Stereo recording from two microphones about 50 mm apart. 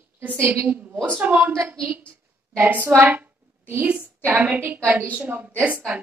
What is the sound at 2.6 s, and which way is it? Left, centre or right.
Speech, right.